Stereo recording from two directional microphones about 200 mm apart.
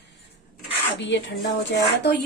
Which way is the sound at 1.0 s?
60° left (ahead or behind).